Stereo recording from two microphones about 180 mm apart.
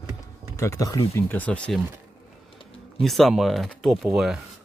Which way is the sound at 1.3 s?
10° left (ahead or behind).